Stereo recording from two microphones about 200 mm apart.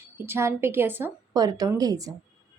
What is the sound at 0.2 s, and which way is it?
A woman's voice, 10° right (ahead or behind).